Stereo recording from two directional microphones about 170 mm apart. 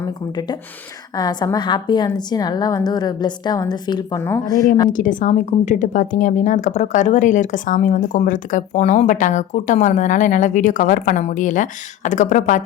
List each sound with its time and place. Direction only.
0.0 s a woman's voice: 25° left (ahead or behind)
4.9 s a woman's voice: 50° left (ahead or behind)